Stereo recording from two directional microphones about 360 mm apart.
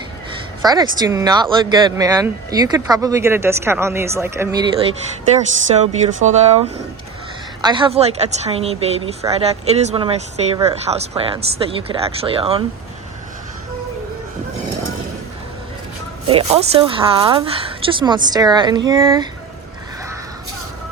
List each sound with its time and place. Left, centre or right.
0.6 s speech: centre
5.7 s speech: centre
16.3 s speech: centre